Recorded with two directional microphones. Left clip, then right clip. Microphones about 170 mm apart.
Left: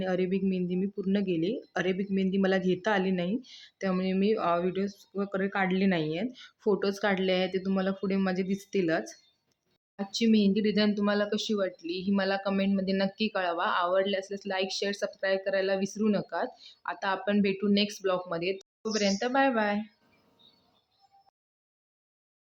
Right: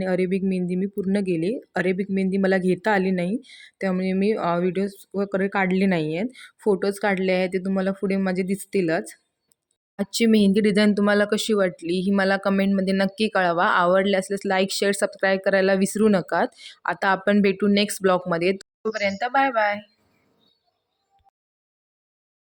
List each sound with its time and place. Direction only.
0.0 s speech: 30° right (ahead or behind)
9.9 s speech: 45° right (ahead or behind)